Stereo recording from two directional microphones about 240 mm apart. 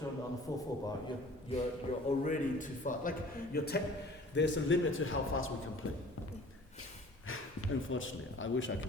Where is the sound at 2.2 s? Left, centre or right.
Left.